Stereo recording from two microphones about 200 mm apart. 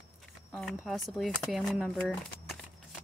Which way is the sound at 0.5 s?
Centre (ahead or behind).